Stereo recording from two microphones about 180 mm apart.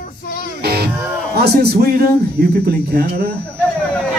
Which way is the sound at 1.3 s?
65° right (ahead or behind).